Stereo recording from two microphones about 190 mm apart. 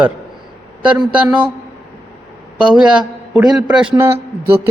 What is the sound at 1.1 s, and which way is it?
Speech, 5° right (ahead or behind).